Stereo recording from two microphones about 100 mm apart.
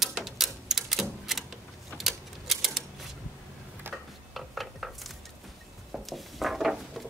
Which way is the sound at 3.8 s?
20° right (ahead or behind).